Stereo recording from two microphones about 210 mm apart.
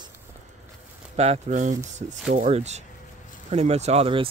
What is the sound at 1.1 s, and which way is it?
Speech, 30° right (ahead or behind).